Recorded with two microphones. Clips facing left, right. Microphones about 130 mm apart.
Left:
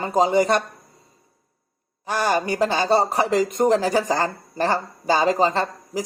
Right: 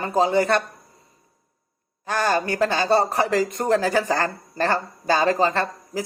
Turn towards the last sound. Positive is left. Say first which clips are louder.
# left 1 dB
turn(degrees=15)  # may be behind; listen again after turning